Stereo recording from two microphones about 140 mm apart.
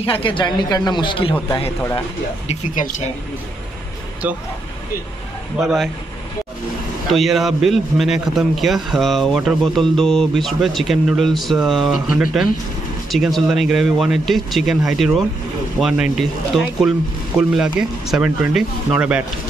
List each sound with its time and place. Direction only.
0.0 s speech: 40° left (ahead or behind)
2.7 s speech: 70° left (ahead or behind)
7.1 s a man's voice: centre (ahead or behind)